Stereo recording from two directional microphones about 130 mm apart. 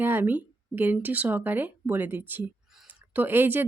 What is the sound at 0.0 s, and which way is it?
A woman's voice, 15° right (ahead or behind).